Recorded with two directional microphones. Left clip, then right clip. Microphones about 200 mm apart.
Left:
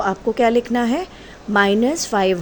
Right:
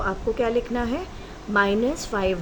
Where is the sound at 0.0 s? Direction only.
40° left (ahead or behind).